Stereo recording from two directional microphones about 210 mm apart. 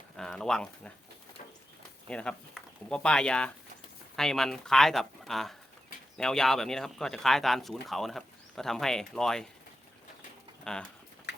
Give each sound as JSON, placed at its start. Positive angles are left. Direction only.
{"t": 0.2, "sound": "speech", "side_deg": 5}
{"t": 2.0, "sound": "speech", "side_deg": 5}
{"t": 10.6, "sound": "speech", "side_deg": 5}
{"t": 11.3, "sound": "a sound", "side_deg": 55}